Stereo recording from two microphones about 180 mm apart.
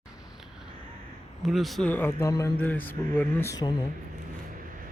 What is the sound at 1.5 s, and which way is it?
Speech, centre (ahead or behind).